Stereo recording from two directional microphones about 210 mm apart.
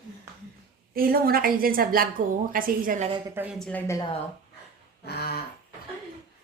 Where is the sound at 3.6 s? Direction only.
10° left (ahead or behind).